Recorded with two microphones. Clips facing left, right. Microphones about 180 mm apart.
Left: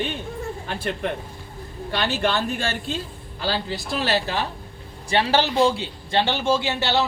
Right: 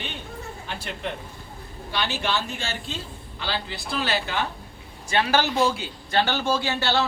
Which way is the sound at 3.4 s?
40° left (ahead or behind).